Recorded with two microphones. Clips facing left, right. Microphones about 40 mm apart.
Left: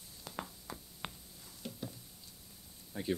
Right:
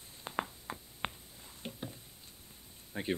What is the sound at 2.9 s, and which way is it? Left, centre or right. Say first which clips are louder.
Speech: right 2 dB; right.